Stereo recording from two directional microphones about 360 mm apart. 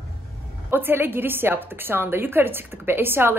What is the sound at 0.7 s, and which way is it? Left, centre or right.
A woman's voice, centre.